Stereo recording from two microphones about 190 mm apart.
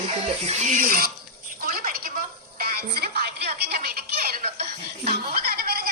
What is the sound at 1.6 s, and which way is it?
Music, 50° right (ahead or behind).